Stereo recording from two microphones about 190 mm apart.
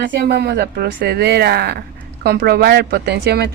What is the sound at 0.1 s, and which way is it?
Speech, 60° right (ahead or behind).